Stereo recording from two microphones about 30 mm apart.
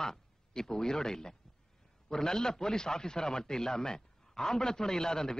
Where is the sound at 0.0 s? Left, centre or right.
Centre.